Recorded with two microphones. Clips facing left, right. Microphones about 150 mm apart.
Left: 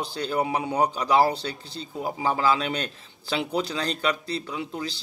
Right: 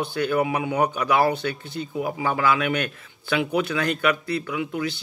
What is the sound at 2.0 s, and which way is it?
Speech, 30° left (ahead or behind).